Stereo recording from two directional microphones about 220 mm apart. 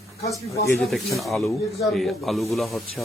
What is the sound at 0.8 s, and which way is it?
Speech, centre (ahead or behind).